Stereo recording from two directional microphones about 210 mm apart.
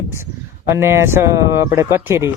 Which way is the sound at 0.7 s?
10° right (ahead or behind).